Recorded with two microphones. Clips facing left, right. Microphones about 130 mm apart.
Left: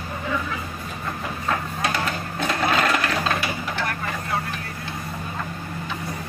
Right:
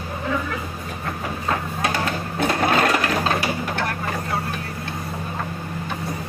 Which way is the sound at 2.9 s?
35° right (ahead or behind).